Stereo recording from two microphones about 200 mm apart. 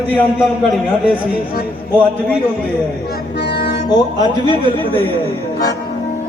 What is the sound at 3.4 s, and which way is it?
Music, 55° left (ahead or behind).